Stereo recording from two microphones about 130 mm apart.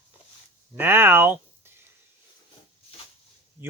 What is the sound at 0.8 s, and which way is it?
Speech, 15° right (ahead or behind).